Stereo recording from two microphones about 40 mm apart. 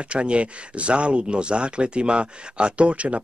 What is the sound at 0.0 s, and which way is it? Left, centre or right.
Speech, right.